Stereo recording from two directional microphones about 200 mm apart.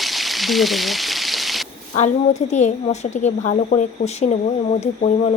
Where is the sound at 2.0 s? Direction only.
35° left (ahead or behind).